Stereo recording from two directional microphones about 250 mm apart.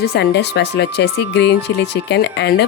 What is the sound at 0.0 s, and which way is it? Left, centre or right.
Speech, left.